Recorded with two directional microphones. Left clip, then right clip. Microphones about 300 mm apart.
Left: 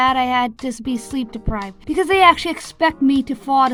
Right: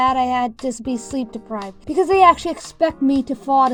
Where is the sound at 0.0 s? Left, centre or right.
Centre.